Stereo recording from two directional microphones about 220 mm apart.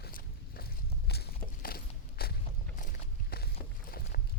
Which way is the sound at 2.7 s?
35° left (ahead or behind).